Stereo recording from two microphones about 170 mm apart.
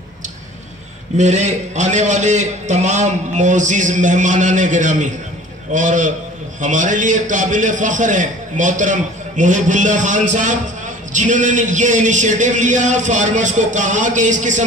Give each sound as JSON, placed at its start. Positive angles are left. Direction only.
{"t": 1.1, "sound": "a man's voice", "side_deg": -45}